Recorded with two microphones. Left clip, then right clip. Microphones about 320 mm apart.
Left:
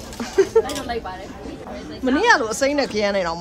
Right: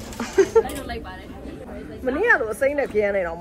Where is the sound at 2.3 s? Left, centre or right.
Left.